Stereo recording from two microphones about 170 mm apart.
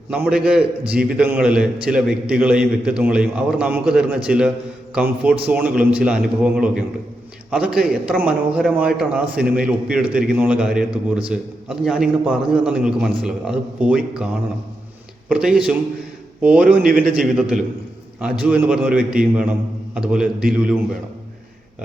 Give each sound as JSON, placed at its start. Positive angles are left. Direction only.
{"t": 0.1, "sound": "a man's voice", "side_deg": -5}
{"t": 15.3, "sound": "a man's voice", "side_deg": -5}
{"t": 16.8, "sound": "a man's voice", "side_deg": -55}
{"t": 18.4, "sound": "a man's voice", "side_deg": -10}